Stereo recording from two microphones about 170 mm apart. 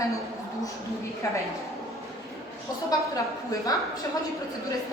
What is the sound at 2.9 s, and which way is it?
Speech, 20° left (ahead or behind).